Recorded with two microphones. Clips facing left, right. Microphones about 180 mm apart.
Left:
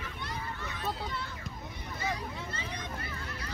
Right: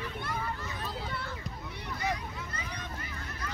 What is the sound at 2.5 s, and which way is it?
Children playing, 25° left (ahead or behind).